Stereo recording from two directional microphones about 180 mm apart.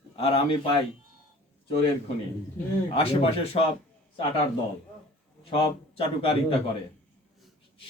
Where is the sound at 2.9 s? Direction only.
30° left (ahead or behind).